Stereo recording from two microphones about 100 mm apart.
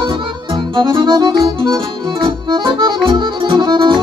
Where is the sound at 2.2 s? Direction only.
50° right (ahead or behind).